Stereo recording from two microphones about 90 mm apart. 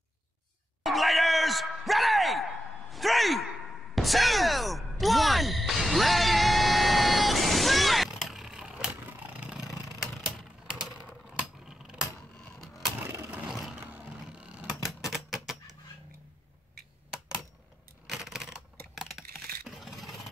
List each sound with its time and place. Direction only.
0.8 s a sound: centre (ahead or behind)
9.2 s vehicle: 15° right (ahead or behind)
11.2 s a sound: 10° right (ahead or behind)
13.0 s vehicle: 30° right (ahead or behind)
13.5 s vehicle: 5° right (ahead or behind)
14.9 s typewriter: centre (ahead or behind)
17.1 s computer keyboard: 5° right (ahead or behind)
19.7 s scrape: centre (ahead or behind)